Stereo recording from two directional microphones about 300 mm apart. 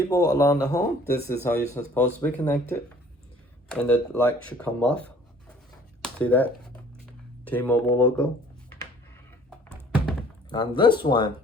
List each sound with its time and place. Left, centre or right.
0.1 s speech: centre
6.0 s a sound: centre
7.0 s speech: centre
9.6 s thunk: centre
10.5 s speech: centre